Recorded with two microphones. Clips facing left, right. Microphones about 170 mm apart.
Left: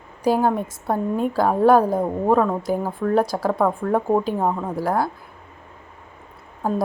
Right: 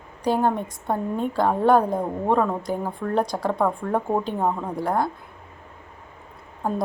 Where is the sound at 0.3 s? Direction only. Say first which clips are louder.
Left 3 dB; 5° left (ahead or behind).